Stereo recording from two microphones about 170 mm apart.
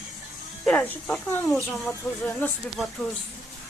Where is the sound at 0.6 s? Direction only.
10° left (ahead or behind).